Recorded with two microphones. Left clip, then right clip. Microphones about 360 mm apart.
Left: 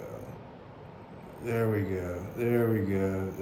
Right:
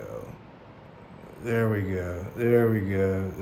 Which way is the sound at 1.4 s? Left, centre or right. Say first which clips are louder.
Right 3 dB; right.